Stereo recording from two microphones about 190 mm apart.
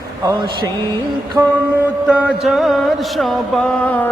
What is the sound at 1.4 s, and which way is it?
Mantra, 10° right (ahead or behind).